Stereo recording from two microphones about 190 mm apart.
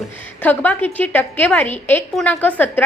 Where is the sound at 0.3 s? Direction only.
10° left (ahead or behind).